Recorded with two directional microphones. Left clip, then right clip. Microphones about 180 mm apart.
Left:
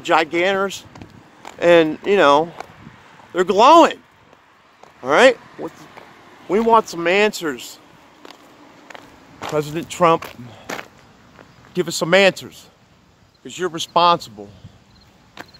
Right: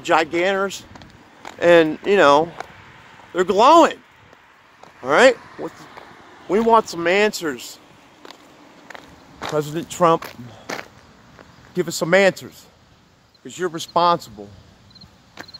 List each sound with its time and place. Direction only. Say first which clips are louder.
0.0 s speech: left 1 dB; 5° left (ahead or behind)
0.9 s a sound: left 1 dB; 5° right (ahead or behind)
1.6 s speech: even; 5° left (ahead or behind)
3.3 s speech: left 2 dB; 10° left (ahead or behind)
5.0 s speech: left 1 dB; 10° left (ahead or behind)
5.7 s speech: even; 25° left (ahead or behind)
6.5 s speech: left 1 dB; 5° left (ahead or behind)
8.8 s a sound: even; 5° right (ahead or behind)
11.3 s speech: left 1 dB; 5° right (ahead or behind)
15.4 s a sound: even; centre (ahead or behind)